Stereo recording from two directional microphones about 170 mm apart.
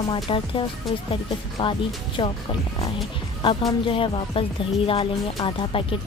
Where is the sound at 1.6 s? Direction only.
30° left (ahead or behind).